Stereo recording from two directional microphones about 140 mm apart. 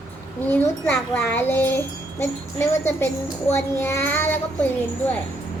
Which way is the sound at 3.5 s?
20° left (ahead or behind).